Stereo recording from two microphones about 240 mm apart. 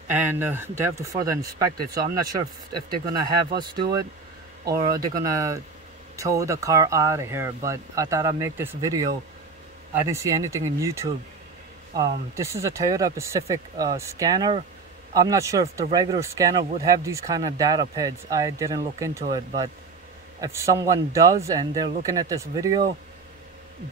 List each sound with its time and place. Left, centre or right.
0.1 s speech: centre
20.3 s a man's voice: centre